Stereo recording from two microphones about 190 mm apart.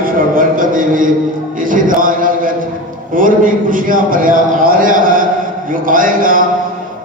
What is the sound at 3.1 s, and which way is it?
A man's voice, 45° right (ahead or behind).